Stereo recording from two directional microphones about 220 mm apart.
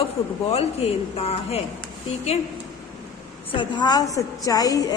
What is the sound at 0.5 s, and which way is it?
Speech, 30° left (ahead or behind).